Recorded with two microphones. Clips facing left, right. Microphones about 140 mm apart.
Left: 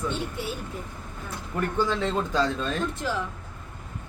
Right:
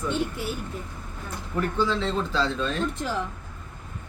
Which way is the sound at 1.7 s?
50° left (ahead or behind).